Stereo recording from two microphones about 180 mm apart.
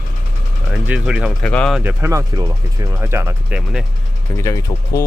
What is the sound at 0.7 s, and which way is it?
Speech, 5° right (ahead or behind).